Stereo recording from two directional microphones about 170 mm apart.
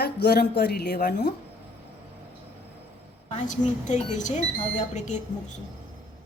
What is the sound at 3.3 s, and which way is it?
Speech, 45° left (ahead or behind).